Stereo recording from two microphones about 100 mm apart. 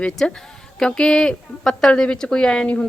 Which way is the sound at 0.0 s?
5° left (ahead or behind).